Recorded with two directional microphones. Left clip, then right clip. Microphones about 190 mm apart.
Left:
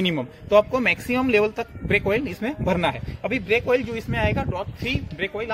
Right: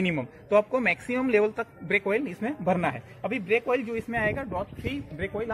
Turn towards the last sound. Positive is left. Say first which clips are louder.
# left 4 dB
turn(degrees=45)  # may be behind; listen again after turning